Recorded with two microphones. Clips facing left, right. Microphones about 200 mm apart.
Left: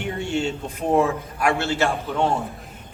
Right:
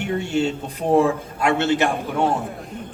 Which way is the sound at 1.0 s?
25° right (ahead or behind).